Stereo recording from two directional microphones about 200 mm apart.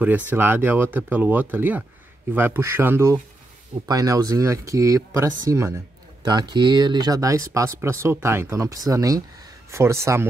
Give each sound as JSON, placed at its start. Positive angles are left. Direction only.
{"t": 0.0, "sound": "speech", "side_deg": -10}